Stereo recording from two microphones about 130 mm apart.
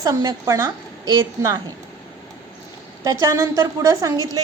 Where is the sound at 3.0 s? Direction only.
25° right (ahead or behind).